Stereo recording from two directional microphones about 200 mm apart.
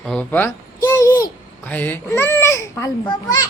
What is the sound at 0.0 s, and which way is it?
Babbling, 5° left (ahead or behind).